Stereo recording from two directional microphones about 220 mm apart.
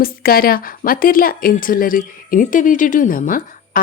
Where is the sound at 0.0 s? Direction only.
40° left (ahead or behind).